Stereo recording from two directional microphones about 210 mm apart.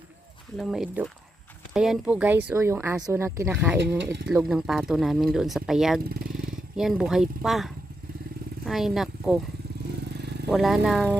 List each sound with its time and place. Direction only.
0.5 s speech: centre (ahead or behind)
3.8 s speech: 55° right (ahead or behind)
4.4 s speech: centre (ahead or behind)
6.1 s motorcycle: 45° right (ahead or behind)
6.7 s speech: centre (ahead or behind)
10.5 s speech: centre (ahead or behind)